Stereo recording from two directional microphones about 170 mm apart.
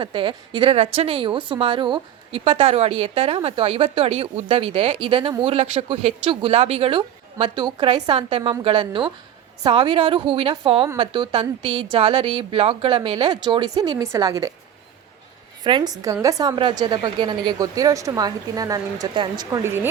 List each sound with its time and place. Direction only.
0.0 s a woman's voice: 30° right (ahead or behind)
15.6 s a woman's voice: 25° right (ahead or behind)